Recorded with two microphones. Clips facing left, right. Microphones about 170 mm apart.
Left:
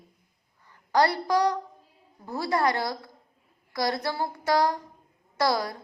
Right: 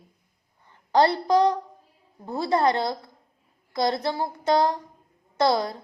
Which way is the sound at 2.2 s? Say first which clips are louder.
Right 3 dB; 20° right (ahead or behind).